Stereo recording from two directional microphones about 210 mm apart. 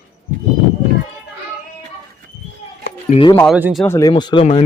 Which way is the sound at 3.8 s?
15° left (ahead or behind).